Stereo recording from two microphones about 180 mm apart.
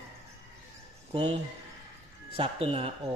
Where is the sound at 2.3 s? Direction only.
30° right (ahead or behind).